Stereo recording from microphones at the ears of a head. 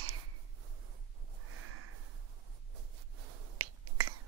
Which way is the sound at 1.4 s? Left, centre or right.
Right.